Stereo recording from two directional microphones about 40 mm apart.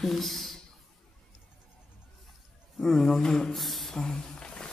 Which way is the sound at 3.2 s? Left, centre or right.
Centre.